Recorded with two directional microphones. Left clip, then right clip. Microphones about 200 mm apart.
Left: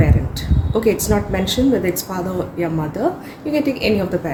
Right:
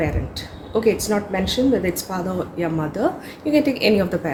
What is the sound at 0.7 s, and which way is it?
A woman's voice, 5° left (ahead or behind).